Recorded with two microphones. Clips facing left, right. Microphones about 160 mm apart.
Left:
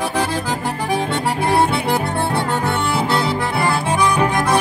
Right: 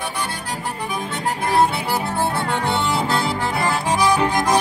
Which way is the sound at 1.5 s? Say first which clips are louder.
Left 1 dB; 65° left (ahead or behind).